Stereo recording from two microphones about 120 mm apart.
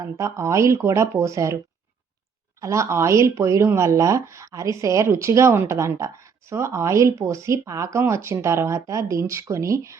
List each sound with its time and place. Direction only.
0.0 s speech: 25° right (ahead or behind)
2.6 s speech: 25° right (ahead or behind)